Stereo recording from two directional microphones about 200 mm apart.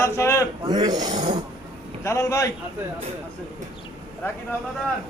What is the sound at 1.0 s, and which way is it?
Speech, 35° right (ahead or behind).